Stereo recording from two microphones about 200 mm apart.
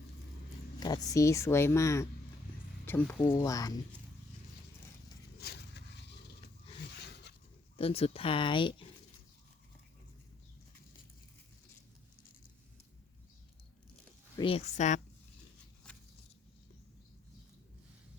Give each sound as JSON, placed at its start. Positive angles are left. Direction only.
{"t": 1.0, "sound": "speech", "side_deg": 15}
{"t": 5.4, "sound": "a sound", "side_deg": 55}
{"t": 7.8, "sound": "speech", "side_deg": 30}
{"t": 14.3, "sound": "speech", "side_deg": 25}